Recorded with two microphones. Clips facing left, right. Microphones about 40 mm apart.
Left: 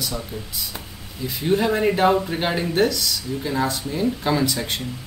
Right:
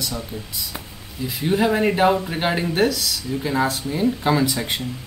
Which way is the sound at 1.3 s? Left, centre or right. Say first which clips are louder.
Right 1 dB; centre.